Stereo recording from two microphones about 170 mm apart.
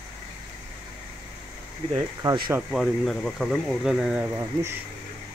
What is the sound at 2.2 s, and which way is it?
Speech, 25° right (ahead or behind).